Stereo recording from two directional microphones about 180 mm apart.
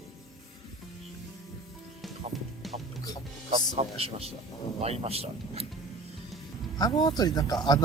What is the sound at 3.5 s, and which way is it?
Speech, 35° right (ahead or behind).